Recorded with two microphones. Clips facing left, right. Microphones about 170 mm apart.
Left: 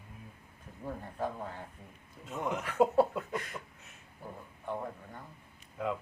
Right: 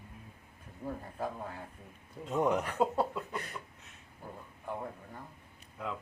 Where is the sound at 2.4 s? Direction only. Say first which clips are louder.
Right 6 dB; 40° right (ahead or behind).